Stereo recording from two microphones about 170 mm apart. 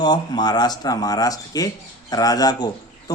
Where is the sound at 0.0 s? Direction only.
25° left (ahead or behind).